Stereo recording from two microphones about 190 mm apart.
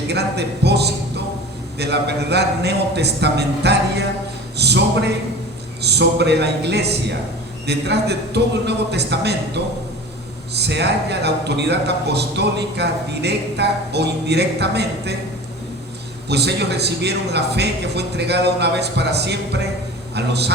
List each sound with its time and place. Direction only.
0.1 s a man's voice: 60° right (ahead or behind)
16.3 s a man's voice: 60° right (ahead or behind)